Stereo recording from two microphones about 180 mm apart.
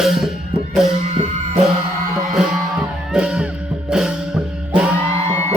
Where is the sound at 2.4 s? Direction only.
5° right (ahead or behind).